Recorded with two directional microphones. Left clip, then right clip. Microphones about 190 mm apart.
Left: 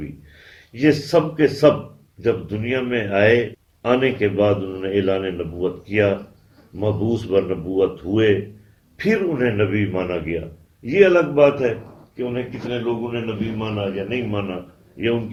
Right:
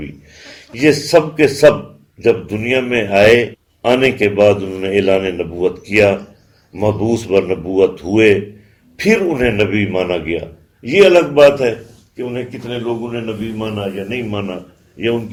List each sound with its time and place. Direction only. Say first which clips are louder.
0.7 s a man's voice: right 6 dB; 25° right (ahead or behind)